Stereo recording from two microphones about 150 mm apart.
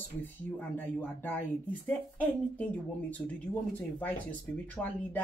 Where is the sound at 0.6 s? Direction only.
10° left (ahead or behind).